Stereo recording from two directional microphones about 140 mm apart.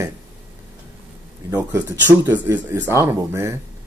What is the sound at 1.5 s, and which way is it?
Speech, 15° right (ahead or behind).